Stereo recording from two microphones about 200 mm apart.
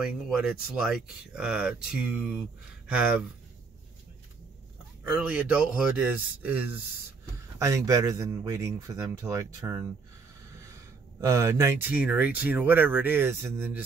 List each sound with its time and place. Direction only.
0.0 s speech: 5° right (ahead or behind)
5.0 s speech: 5° right (ahead or behind)
11.1 s speech: 15° right (ahead or behind)